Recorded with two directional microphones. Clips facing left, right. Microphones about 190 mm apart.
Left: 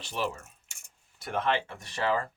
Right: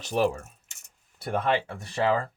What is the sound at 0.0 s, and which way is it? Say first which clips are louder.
Speech: right 8 dB; 45° right (ahead or behind).